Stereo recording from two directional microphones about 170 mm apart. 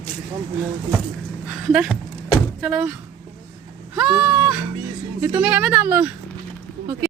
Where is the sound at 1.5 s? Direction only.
Centre (ahead or behind).